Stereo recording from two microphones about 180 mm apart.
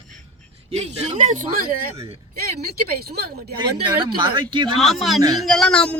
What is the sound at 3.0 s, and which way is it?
Speech, 60° right (ahead or behind).